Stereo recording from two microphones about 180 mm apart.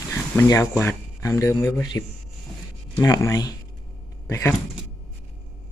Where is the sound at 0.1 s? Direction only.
15° left (ahead or behind).